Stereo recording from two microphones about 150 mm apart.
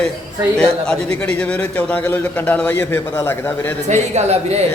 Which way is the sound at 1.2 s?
10° left (ahead or behind).